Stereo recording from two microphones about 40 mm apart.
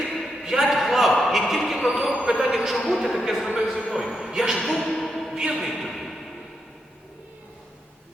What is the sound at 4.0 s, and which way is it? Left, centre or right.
Speech, centre.